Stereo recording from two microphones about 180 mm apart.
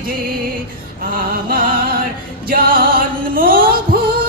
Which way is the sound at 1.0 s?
50° right (ahead or behind).